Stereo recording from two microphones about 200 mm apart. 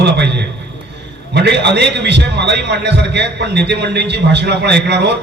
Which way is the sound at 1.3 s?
55° right (ahead or behind).